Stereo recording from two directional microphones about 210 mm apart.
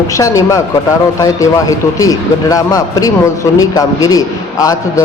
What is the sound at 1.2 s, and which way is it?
A man's voice, 15° left (ahead or behind).